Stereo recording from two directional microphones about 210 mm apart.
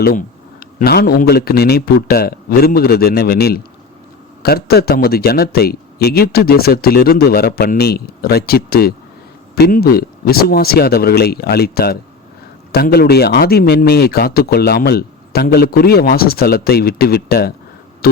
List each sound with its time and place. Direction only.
0.0 s speech: 40° left (ahead or behind)
18.0 s music: 45° left (ahead or behind)